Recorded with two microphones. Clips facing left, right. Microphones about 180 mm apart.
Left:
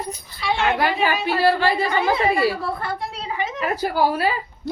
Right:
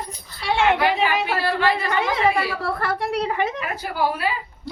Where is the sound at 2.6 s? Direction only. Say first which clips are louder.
Right 2 dB; 75° right (ahead or behind); by 3.5 s 60° right (ahead or behind).